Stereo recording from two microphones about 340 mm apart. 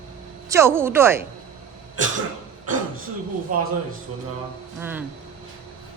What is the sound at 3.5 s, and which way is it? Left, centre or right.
Speech, right.